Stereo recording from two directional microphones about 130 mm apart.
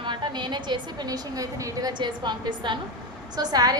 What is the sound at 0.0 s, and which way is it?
A woman's voice, 35° right (ahead or behind).